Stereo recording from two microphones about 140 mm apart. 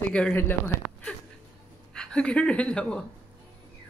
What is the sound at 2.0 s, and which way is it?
Speech, 5° left (ahead or behind).